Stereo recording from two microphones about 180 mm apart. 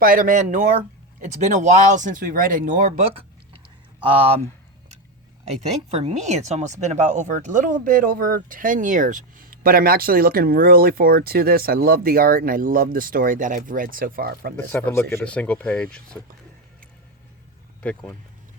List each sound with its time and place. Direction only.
0.0 s speech: 50° right (ahead or behind); by 4.4 s 30° right (ahead or behind)
5.9 s speech: 40° right (ahead or behind); by 14.5 s 55° right (ahead or behind)
14.5 s speech: 10° left (ahead or behind)